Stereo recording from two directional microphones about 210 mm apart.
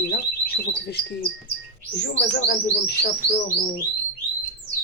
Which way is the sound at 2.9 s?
50° left (ahead or behind).